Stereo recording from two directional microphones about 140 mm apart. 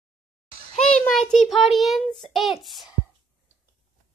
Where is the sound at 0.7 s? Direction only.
5° left (ahead or behind).